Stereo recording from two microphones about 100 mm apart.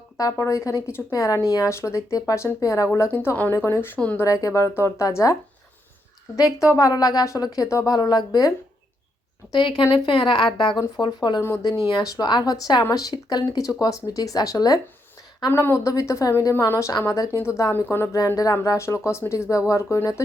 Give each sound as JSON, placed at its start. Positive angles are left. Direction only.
{"t": 0.2, "sound": "a woman's voice", "side_deg": 35}
{"t": 4.2, "sound": "a woman's voice", "side_deg": 35}
{"t": 9.5, "sound": "speech", "side_deg": 55}
{"t": 10.8, "sound": "speech", "side_deg": 45}
{"t": 11.3, "sound": "speech", "side_deg": 25}
{"t": 12.0, "sound": "a woman's voice", "side_deg": 40}
{"t": 15.5, "sound": "a woman's voice", "side_deg": 25}